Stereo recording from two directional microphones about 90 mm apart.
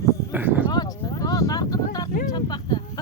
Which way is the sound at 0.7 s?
45° left (ahead or behind).